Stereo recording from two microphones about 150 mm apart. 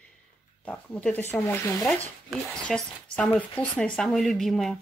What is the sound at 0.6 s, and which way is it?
Speech, 5° left (ahead or behind).